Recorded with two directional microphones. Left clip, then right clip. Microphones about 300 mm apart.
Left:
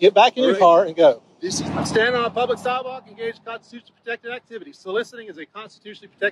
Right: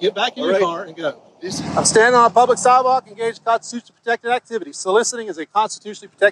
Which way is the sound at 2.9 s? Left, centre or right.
Right.